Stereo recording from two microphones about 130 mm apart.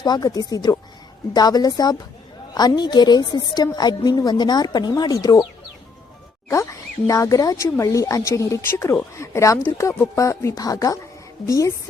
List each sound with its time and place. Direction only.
0.0 s a woman's voice: 30° left (ahead or behind)
6.5 s speech: 25° left (ahead or behind)